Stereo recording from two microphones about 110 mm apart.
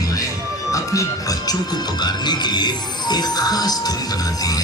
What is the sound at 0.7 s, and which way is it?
Speech, 30° left (ahead or behind).